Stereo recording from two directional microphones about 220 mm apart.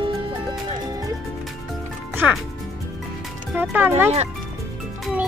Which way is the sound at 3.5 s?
10° right (ahead or behind).